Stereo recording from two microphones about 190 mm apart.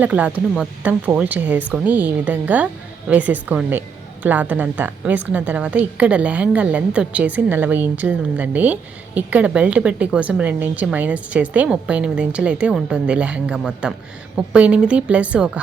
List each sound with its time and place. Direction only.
0.0 s a woman's voice: 5° right (ahead or behind)